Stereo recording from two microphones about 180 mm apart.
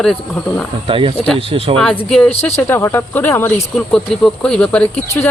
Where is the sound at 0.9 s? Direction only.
30° right (ahead or behind).